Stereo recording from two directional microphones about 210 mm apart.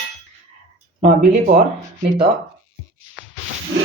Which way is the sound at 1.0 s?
30° right (ahead or behind).